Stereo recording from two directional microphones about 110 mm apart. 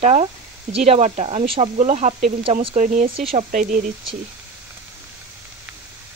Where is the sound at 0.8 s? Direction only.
65° right (ahead or behind); by 2.1 s 85° right.